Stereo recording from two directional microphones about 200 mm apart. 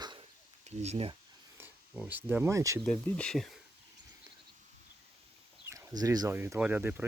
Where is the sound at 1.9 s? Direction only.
5° right (ahead or behind).